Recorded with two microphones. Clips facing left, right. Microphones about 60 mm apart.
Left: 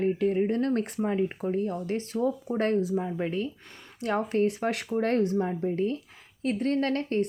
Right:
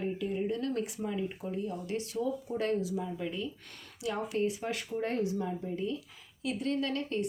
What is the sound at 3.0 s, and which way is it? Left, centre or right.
Speech, left.